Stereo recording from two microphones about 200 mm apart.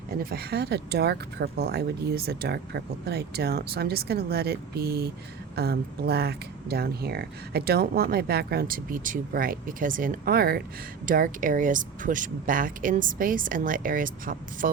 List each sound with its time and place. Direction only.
0.2 s speech: 50° right (ahead or behind)